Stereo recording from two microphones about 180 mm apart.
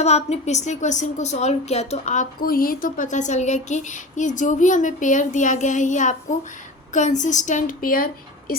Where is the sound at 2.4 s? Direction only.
55° left (ahead or behind).